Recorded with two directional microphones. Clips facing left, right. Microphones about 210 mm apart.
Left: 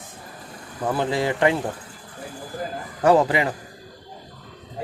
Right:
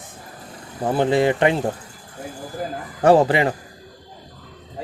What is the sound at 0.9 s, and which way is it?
Speech, 25° right (ahead or behind).